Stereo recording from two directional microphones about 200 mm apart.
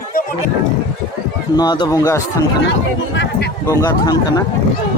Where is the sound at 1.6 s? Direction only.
20° left (ahead or behind).